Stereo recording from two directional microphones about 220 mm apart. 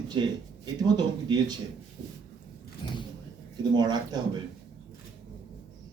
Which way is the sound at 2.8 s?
20° left (ahead or behind).